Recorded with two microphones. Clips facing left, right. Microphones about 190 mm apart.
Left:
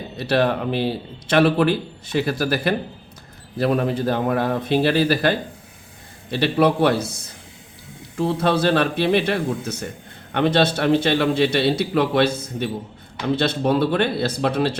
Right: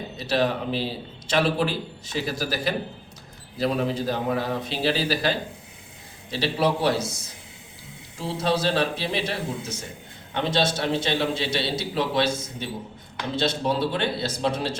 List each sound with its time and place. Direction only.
0.2 s a man's voice: 60° left (ahead or behind)